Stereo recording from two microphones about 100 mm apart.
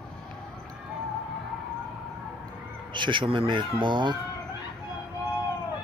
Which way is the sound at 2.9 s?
55° right (ahead or behind).